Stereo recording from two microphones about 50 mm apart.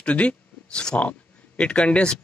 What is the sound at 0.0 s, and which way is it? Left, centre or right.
Speech, left.